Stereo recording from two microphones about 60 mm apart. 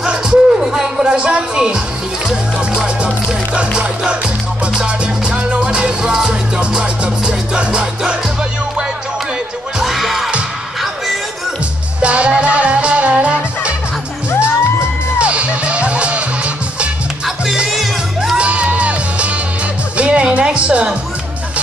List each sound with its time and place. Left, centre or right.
0.0 s music: centre
2.2 s speech: centre
4.7 s music: centre
9.8 s music: centre
12.0 s music: right
15.1 s music: centre
17.6 s music: centre
18.4 s music: right